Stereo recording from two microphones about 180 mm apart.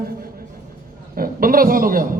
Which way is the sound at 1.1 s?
50° right (ahead or behind).